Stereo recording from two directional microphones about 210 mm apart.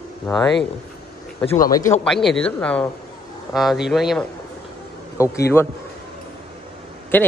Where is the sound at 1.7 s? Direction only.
15° left (ahead or behind).